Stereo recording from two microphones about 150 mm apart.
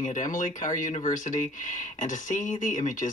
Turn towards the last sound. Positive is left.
turn(degrees=55)  # may be behind; listen again after turning